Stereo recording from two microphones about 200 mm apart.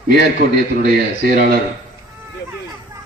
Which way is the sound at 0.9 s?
50° right (ahead or behind).